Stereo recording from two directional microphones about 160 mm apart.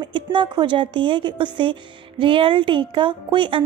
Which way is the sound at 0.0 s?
30° right (ahead or behind).